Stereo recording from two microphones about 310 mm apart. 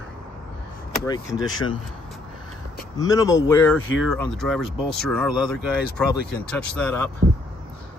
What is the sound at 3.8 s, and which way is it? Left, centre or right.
Speech, left.